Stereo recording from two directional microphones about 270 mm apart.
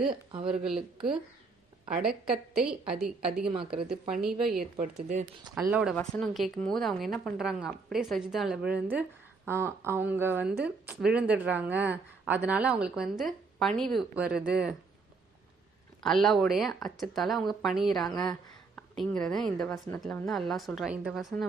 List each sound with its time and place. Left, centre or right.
0.3 s speech: centre
0.6 s a woman's voice: centre
3.4 s speech: centre
4.1 s a woman's voice: centre
4.8 s speech: right
5.6 s a woman's voice: centre
16.0 s a woman's voice: centre